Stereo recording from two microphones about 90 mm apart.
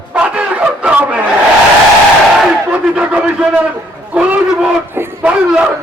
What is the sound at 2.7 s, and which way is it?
A man's voice, 15° right (ahead or behind).